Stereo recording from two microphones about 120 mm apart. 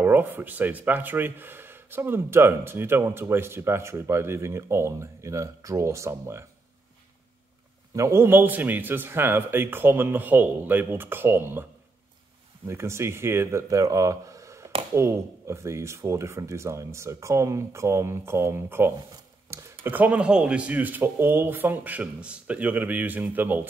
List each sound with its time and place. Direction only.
0.0 s speech: 15° right (ahead or behind)
7.9 s speech: 25° right (ahead or behind)
12.6 s speech: 25° right (ahead or behind)